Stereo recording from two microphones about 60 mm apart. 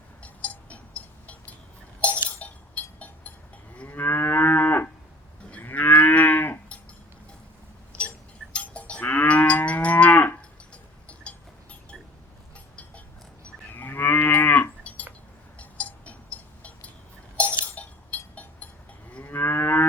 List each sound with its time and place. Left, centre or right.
0.2 s cowbell: left
2.0 s chink: left
2.4 s a sound: left
3.8 s moo: left
8.5 s livestock: left
13.7 s moo: left
15.5 s cowbell: left
17.3 s a sound: left
19.2 s moo: left